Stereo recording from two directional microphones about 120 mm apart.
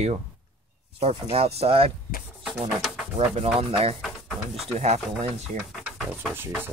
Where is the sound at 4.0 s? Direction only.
Centre (ahead or behind).